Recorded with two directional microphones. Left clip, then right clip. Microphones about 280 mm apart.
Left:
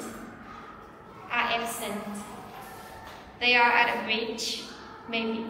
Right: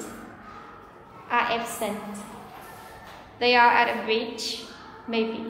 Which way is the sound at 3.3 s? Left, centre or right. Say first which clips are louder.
Right 3 dB; centre.